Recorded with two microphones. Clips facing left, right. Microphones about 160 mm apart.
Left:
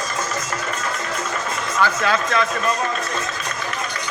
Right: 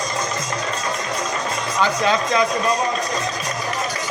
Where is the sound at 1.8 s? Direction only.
20° right (ahead or behind).